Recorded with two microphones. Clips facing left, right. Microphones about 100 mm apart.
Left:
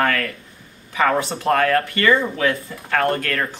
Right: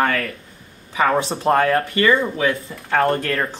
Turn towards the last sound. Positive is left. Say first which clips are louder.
# right 1 dB
turn(degrees=-25)  # may be behind; listen again after turning